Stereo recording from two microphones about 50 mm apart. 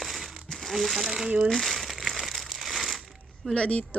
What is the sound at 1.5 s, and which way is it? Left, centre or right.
Crumpling, centre.